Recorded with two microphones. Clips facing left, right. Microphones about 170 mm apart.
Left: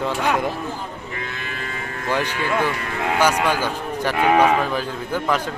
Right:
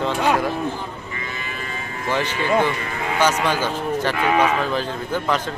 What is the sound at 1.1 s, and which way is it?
Cattle, 60° left (ahead or behind).